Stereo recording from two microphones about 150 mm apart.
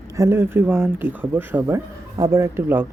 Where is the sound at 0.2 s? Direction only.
15° right (ahead or behind).